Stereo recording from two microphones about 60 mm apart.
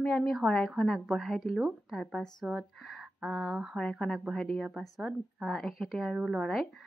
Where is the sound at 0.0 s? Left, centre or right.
Centre.